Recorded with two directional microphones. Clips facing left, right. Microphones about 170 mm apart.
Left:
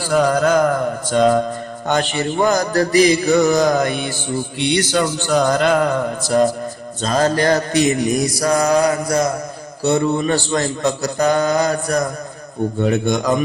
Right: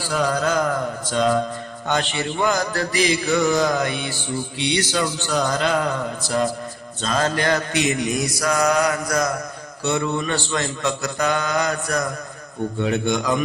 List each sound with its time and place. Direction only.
0.1 s mantra: 50° left (ahead or behind); by 9.3 s 30° left (ahead or behind)
9.8 s mantra: 40° left (ahead or behind)